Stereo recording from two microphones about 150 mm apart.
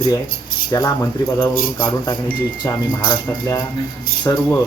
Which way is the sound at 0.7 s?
25° left (ahead or behind).